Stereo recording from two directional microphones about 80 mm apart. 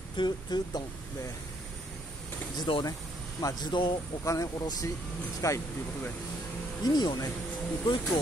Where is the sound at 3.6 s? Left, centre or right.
Left.